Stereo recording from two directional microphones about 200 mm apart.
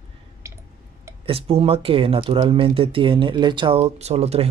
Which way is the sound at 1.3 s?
30° right (ahead or behind).